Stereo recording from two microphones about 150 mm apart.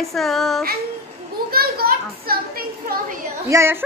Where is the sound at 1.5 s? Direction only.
90° right.